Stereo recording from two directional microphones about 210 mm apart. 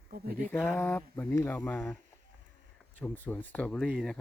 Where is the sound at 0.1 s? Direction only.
45° right (ahead or behind).